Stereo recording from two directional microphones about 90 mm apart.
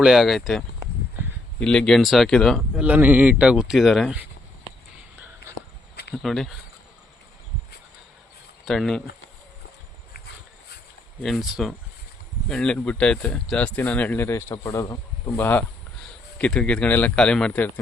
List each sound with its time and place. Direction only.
0.0 s speech: centre (ahead or behind)
1.2 s a sound: 25° right (ahead or behind)
1.5 s speech: 10° left (ahead or behind)
2.7 s speech: 15° right (ahead or behind); by 4.1 s centre (ahead or behind)
6.2 s speech: 5° left (ahead or behind)
8.6 s speech: centre (ahead or behind)
11.2 s speech: centre (ahead or behind)
12.5 s a man's voice: 10° left (ahead or behind)
14.3 s speech: 30° left (ahead or behind)
14.6 s speech: 40° left (ahead or behind)
15.3 s speech: 20° left (ahead or behind)
16.4 s a man's voice: 10° left (ahead or behind)